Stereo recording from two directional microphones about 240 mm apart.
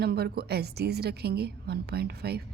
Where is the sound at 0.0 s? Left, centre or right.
Right.